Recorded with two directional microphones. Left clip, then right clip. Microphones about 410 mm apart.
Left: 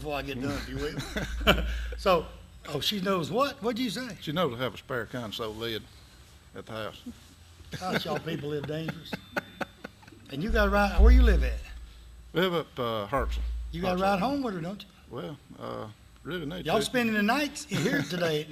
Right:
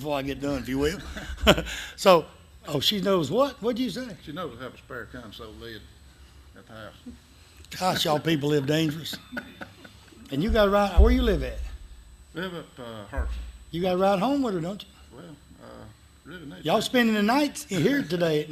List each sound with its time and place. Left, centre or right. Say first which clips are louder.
0.0 s speech: right 4 dB; right
2.6 s speech: right 5 dB; right; by 4.1 s centre
4.2 s speech: left 6 dB; left
8.0 s speech: right 8 dB; right
9.6 s a sound: left 6 dB; left
10.2 s speech: right 5 dB; centre
12.3 s speech: left 7 dB; left
13.7 s speech: right 4 dB; centre
15.1 s a man's voice: left 7 dB; left
16.6 s speech: right 4 dB; centre